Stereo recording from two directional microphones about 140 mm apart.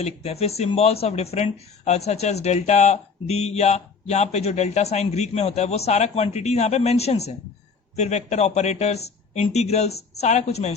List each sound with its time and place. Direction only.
0.0 s speech: 50° left (ahead or behind)